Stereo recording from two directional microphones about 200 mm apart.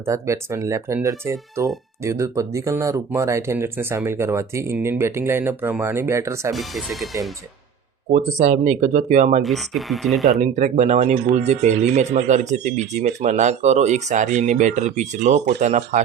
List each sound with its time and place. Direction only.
0.0 s speech: 15° right (ahead or behind)
6.5 s speech: centre (ahead or behind)
8.1 s speech: 35° right (ahead or behind)
9.4 s speech: centre (ahead or behind)
10.4 s speech: 35° right (ahead or behind)